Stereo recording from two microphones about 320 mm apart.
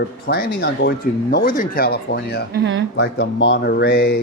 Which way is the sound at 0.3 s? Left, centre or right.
Left.